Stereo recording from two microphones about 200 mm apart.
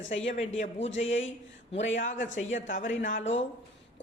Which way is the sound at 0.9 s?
70° left (ahead or behind).